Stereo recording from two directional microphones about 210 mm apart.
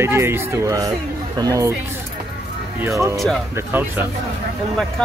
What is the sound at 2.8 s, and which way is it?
Speech, 15° right (ahead or behind).